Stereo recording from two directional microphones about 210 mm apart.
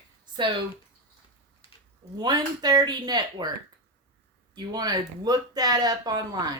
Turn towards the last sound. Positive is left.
turn(degrees=-20)  # may be behind; listen again after turning